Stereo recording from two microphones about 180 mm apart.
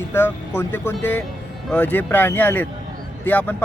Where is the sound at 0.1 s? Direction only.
10° left (ahead or behind).